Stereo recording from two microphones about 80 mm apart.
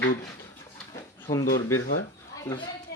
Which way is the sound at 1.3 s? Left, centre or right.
Left.